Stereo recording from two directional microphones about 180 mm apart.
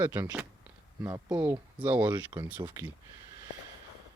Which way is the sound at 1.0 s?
20° right (ahead or behind).